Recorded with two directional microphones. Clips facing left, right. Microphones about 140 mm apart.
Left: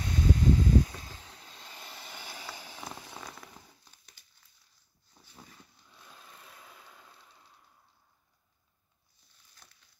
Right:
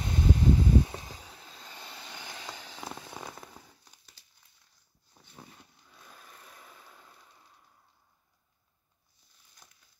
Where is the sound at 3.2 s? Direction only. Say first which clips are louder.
Right 3 dB; 15° right (ahead or behind).